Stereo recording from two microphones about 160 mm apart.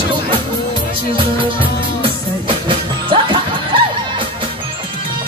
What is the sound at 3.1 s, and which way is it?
Music, 30° right (ahead or behind).